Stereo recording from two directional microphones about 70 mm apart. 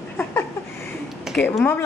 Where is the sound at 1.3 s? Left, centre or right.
Centre.